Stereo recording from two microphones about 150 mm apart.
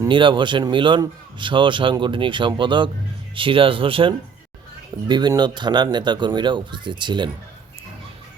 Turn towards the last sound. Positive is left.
turn(degrees=-30)  # may be behind; listen again after turning